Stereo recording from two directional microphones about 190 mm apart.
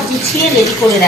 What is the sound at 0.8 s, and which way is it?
Speech, 15° left (ahead or behind).